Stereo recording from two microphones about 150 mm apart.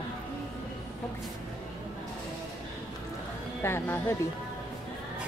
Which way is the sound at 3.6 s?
15° left (ahead or behind).